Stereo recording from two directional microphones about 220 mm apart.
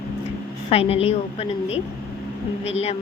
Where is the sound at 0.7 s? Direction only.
25° left (ahead or behind).